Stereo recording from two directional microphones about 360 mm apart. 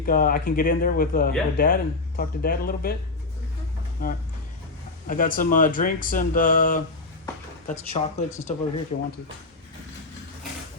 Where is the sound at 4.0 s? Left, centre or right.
Left.